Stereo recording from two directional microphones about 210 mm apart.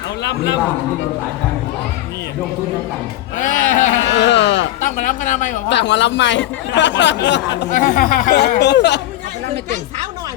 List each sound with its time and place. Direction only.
0.3 s speech: 55° left (ahead or behind)
3.5 s a woman's voice: 35° left (ahead or behind)
4.1 s speech: 55° left (ahead or behind)
4.8 s a woman's voice: 35° left (ahead or behind)
5.6 s speech: 55° left (ahead or behind)
7.7 s speech: 40° left (ahead or behind); by 9.0 s 55° left (ahead or behind)